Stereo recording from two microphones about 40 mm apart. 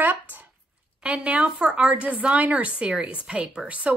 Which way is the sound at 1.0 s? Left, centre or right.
Right.